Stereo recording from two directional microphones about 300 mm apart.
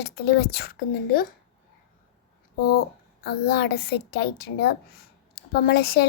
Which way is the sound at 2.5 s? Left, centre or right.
Left.